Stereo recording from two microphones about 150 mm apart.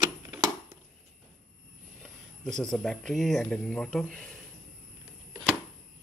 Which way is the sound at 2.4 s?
5° left (ahead or behind).